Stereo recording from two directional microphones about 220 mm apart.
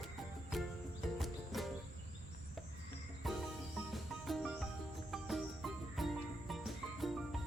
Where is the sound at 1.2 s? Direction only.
Centre (ahead or behind).